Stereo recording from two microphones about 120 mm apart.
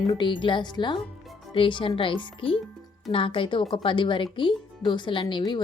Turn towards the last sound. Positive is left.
turn(degrees=40)  # may be behind; listen again after turning